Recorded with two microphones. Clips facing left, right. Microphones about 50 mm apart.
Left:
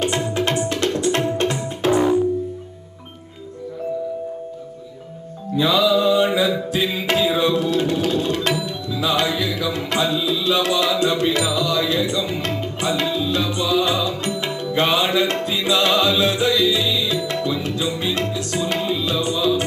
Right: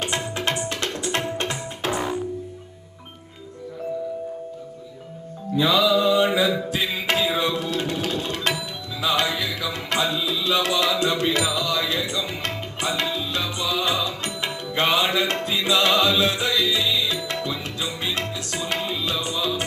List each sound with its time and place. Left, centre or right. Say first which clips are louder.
0.2 s music: left 5 dB; centre
1.9 s music: left 9 dB; centre
5.5 s music: left 2 dB; left
5.8 s mantra: left 3 dB; right
6.5 s music: left 3 dB; right
17.8 s tabla: left 3 dB; right